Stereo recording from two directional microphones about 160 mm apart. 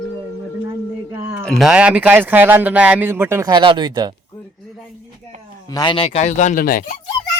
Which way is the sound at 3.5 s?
30° right (ahead or behind).